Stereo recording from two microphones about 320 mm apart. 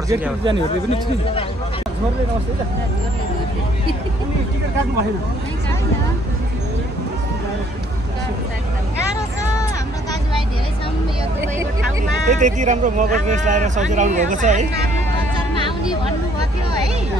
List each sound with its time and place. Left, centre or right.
0.1 s speech: centre
12.3 s speech: right